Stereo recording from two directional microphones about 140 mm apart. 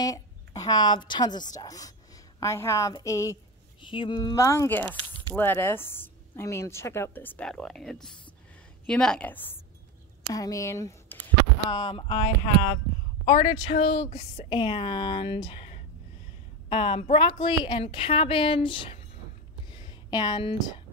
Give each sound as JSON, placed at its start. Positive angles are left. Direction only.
{"t": 0.0, "sound": "a woman's voice", "side_deg": 25}
{"t": 3.8, "sound": "speech", "side_deg": 35}
{"t": 10.3, "sound": "speech", "side_deg": 25}
{"t": 11.7, "sound": "a woman's voice", "side_deg": 35}
{"t": 19.7, "sound": "a sound", "side_deg": 30}